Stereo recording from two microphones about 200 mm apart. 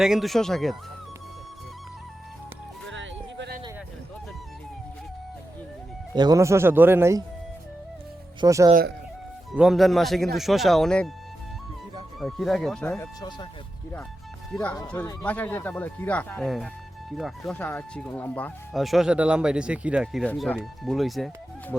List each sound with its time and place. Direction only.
0.0 s speech: centre (ahead or behind)
2.9 s music: 65° right (ahead or behind)
6.1 s speech: 15° right (ahead or behind)
8.4 s speech: 15° right (ahead or behind)
9.5 s speech: centre (ahead or behind)
12.2 s speech: centre (ahead or behind)
14.5 s speech: 5° left (ahead or behind)